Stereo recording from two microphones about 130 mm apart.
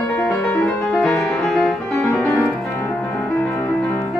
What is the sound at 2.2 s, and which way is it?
Music, 25° left (ahead or behind).